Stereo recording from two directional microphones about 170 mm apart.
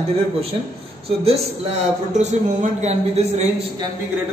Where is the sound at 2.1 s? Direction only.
45° right (ahead or behind).